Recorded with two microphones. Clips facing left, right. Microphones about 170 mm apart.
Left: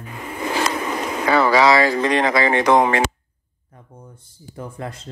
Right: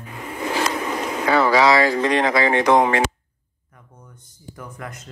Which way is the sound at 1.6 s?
90° left.